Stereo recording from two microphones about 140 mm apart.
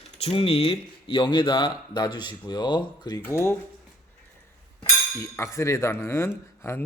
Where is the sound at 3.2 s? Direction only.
15° left (ahead or behind).